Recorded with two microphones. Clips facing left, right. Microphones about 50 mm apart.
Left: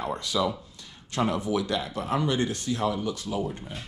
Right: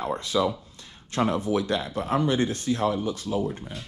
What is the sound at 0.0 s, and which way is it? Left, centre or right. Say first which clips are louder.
Speech: right 2 dB; right.